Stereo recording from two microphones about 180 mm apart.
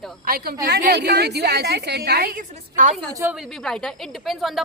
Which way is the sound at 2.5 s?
45° right (ahead or behind).